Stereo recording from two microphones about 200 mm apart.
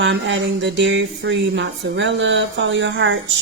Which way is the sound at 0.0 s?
65° right (ahead or behind).